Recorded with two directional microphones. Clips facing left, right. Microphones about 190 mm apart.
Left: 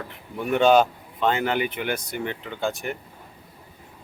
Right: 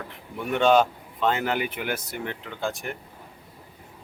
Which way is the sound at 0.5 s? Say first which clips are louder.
Left 2 dB; 5° left (ahead or behind).